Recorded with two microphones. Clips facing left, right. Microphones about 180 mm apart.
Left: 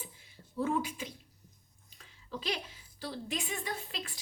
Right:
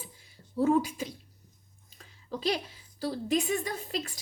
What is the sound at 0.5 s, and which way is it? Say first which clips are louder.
A woman's voice: right 7 dB; 40° right (ahead or behind).